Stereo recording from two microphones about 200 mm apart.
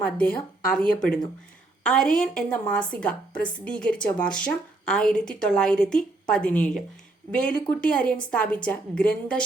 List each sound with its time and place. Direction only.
0.0 s a woman's voice: 5° left (ahead or behind)